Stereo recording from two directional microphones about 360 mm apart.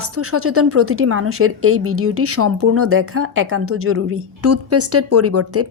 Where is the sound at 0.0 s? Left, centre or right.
Right.